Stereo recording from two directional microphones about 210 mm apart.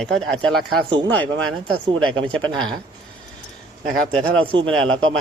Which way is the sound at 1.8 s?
20° right (ahead or behind).